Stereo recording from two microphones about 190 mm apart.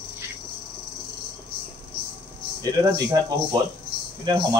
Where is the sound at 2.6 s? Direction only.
20° right (ahead or behind).